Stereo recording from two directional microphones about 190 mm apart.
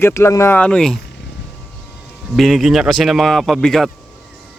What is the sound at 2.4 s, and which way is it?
Speech, centre (ahead or behind).